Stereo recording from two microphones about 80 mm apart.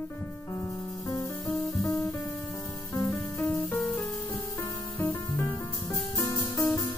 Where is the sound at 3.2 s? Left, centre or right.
Left.